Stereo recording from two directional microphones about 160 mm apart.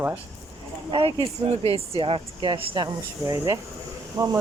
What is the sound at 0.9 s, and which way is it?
Speech, 35° right (ahead or behind).